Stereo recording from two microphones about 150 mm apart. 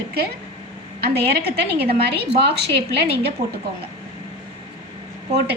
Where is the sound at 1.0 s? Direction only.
90° right.